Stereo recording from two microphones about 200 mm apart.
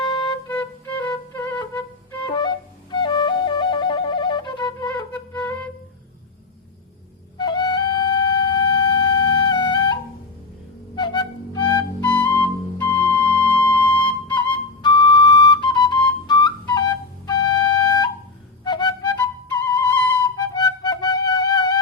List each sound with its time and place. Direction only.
0.0 s music: 25° left (ahead or behind)
0.4 s flute: 10° left (ahead or behind)
1.0 s music: 20° left (ahead or behind)
2.2 s flute: 25° left (ahead or behind)
4.9 s music: 10° left (ahead or behind)
7.3 s flute: 20° left (ahead or behind)
10.9 s music: 20° left (ahead or behind)
12.0 s music: 10° left (ahead or behind)
13.7 s flute: 10° left (ahead or behind)
14.5 s flute: 20° left (ahead or behind)
18.6 s music: 20° left (ahead or behind)
20.2 s music: 20° left (ahead or behind)